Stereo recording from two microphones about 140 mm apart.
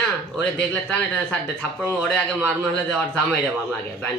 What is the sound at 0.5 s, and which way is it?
A man's voice, 10° left (ahead or behind).